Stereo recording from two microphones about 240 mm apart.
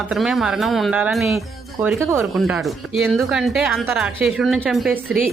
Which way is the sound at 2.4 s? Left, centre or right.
Centre.